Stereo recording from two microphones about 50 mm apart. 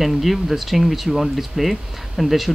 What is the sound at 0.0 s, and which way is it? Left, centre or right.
Speech, centre.